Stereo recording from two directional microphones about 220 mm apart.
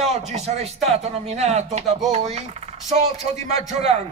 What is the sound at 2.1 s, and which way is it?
Speech, 30° right (ahead or behind).